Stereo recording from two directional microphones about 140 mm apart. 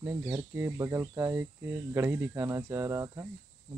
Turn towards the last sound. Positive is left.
turn(degrees=-20)  # may be behind; listen again after turning